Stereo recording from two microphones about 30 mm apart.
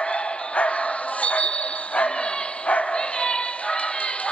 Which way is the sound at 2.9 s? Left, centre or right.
Left.